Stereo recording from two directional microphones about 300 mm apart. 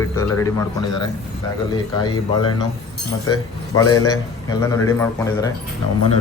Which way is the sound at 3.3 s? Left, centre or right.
Centre.